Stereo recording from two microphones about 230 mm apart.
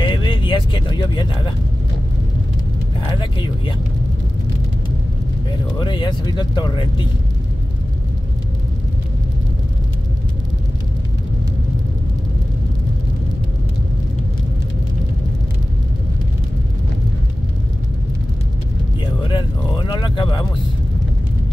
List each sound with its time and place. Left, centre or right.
0.0 s vehicle: centre
3.1 s speech: left
5.8 s speech: left
19.3 s a sound: centre